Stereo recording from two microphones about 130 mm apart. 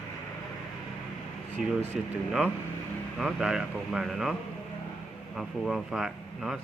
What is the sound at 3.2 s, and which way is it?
Speech, 5° right (ahead or behind).